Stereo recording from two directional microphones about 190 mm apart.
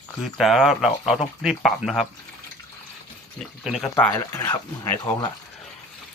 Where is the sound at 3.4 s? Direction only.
Centre (ahead or behind); by 5.2 s 20° left (ahead or behind).